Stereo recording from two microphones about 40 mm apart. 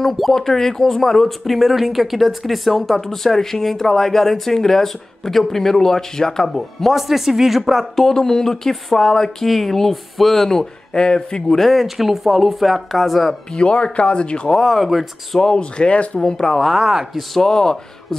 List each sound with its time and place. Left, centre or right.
0.0 s speech: centre
6.9 s speech: centre
7.9 s speech: centre
10.9 s speech: left
11.5 s speech: centre
13.6 s speech: left
14.6 s speech: centre
15.3 s speech: centre
16.2 s speech: centre
16.6 s speech: centre
17.4 s speech: centre